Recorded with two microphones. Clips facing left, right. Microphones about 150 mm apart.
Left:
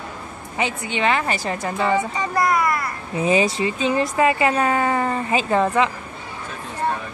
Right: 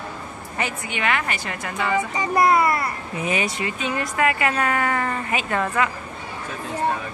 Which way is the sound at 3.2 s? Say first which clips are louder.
Left 7 dB; 30° left (ahead or behind).